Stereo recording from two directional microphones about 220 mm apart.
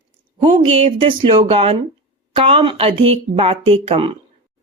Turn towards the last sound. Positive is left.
turn(degrees=-25)  # may be behind; listen again after turning